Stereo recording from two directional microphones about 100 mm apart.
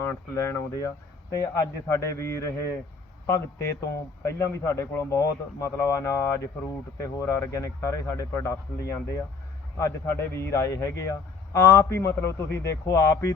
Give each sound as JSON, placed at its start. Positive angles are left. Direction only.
{"t": 0.0, "sound": "a man's voice", "side_deg": 25}